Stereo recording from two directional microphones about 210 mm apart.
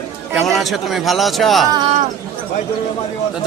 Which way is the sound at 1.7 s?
20° right (ahead or behind).